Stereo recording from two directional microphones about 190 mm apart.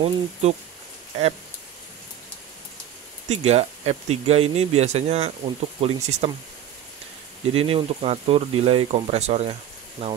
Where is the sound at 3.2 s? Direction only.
35° right (ahead or behind).